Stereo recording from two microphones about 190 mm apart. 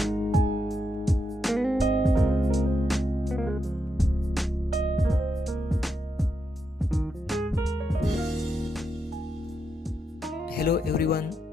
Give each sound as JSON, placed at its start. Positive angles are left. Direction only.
{"t": 0.0, "sound": "music", "side_deg": 0}
{"t": 10.5, "sound": "music", "side_deg": 55}